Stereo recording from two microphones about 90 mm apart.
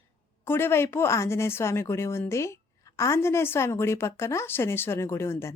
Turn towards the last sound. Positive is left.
turn(degrees=30)  # may be behind; listen again after turning